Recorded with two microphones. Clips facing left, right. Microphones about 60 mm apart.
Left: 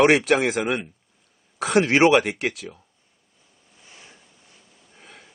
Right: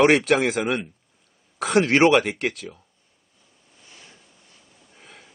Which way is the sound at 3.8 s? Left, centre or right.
Centre.